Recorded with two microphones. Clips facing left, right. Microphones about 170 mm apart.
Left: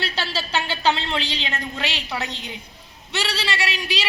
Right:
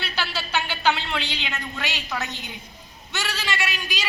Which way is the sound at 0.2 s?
30° left (ahead or behind).